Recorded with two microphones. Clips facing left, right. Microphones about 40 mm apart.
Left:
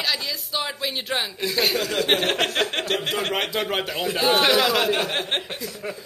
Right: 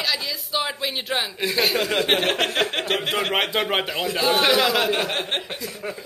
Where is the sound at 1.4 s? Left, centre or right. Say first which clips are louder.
Right 2 dB; centre.